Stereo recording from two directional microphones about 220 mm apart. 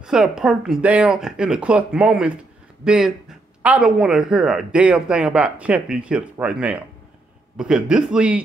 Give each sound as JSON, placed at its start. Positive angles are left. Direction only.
{"t": 0.0, "sound": "speech", "side_deg": 0}